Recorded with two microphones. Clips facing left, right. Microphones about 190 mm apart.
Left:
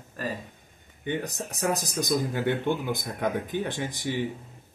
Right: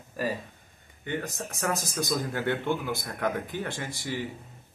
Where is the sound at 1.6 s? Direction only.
15° left (ahead or behind).